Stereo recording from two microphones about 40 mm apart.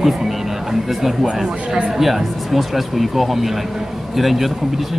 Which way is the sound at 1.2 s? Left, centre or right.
Centre.